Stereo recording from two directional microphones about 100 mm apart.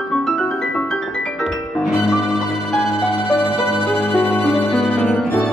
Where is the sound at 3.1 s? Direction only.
65° left (ahead or behind).